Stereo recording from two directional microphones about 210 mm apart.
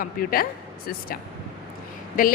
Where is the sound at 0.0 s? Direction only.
45° left (ahead or behind).